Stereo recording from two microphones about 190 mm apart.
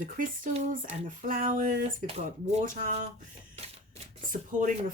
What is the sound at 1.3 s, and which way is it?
Speech, 40° right (ahead or behind).